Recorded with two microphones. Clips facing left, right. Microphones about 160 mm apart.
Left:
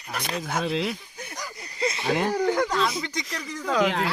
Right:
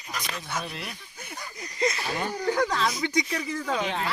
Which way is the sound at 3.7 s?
90° left.